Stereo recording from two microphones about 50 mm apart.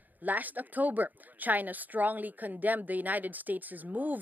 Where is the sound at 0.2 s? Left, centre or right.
Right.